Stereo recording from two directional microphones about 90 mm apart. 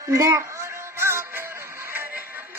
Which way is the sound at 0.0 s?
35° right (ahead or behind).